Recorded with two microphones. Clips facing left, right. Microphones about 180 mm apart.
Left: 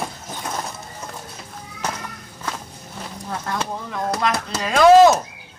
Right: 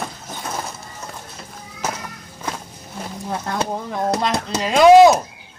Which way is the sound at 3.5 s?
30° right (ahead or behind).